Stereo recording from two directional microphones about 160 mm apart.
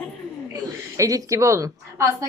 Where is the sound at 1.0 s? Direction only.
20° right (ahead or behind).